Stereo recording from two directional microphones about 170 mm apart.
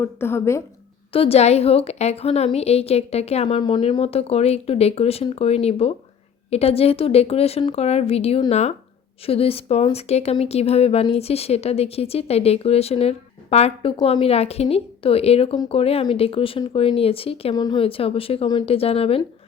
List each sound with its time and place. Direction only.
0.0 s a woman's voice: 15° left (ahead or behind)
1.1 s a woman's voice: 35° left (ahead or behind)
17.5 s a woman's voice: 25° left (ahead or behind)